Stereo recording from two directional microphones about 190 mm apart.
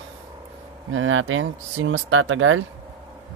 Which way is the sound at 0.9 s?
90° right.